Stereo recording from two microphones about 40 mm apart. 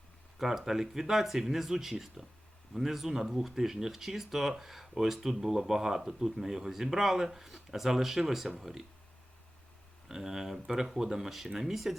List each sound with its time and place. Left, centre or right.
0.3 s speech: centre
10.1 s speech: centre